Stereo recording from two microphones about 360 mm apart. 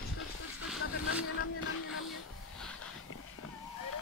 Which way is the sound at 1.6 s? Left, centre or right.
Left.